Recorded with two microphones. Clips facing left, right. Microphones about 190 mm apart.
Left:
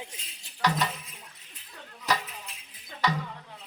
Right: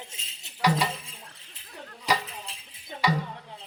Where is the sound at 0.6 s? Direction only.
10° right (ahead or behind).